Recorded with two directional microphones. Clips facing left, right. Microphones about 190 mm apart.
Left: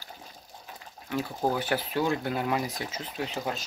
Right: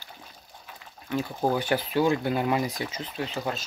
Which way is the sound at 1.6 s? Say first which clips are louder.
Right 4 dB; 5° left (ahead or behind).